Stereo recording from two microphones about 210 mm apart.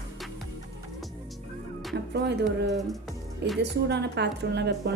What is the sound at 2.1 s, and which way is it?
A woman's voice, 55° right (ahead or behind).